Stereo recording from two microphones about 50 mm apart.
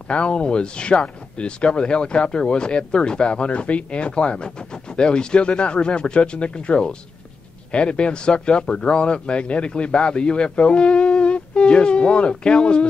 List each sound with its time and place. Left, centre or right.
0.1 s speech: left